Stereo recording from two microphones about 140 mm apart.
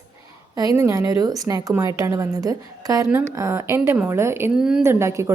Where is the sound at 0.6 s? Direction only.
25° right (ahead or behind).